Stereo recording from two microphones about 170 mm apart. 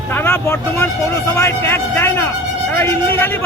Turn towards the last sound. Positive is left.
turn(degrees=15)  # may be behind; listen again after turning